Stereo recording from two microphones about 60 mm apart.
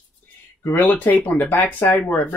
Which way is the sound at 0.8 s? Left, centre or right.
Left.